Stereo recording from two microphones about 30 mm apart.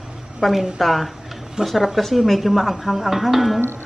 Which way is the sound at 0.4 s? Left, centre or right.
Centre.